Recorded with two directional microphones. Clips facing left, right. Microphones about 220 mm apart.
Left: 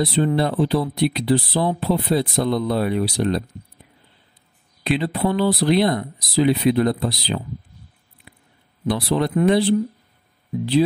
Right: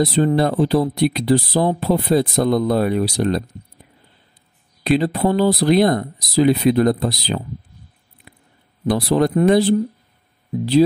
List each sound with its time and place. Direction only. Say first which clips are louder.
0.0 s speech: right 3 dB; 40° right (ahead or behind)
4.8 s speech: right 4 dB; 40° right (ahead or behind)
8.3 s a sound: right 1 dB; 45° right (ahead or behind)
8.8 s speech: right 4 dB; 45° right (ahead or behind)